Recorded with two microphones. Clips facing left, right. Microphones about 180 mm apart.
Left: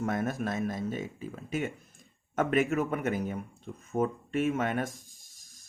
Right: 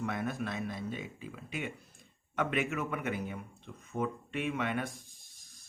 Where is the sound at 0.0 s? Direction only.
45° left (ahead or behind).